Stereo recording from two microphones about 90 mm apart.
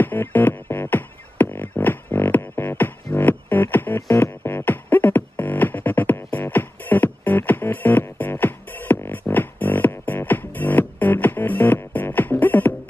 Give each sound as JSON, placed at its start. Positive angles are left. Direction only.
{"t": 0.0, "sound": "music", "side_deg": 20}